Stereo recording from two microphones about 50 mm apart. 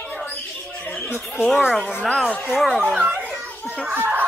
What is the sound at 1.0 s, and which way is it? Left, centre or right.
Speech, left.